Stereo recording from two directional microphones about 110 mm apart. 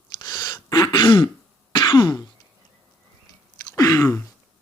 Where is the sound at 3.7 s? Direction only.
35° left (ahead or behind).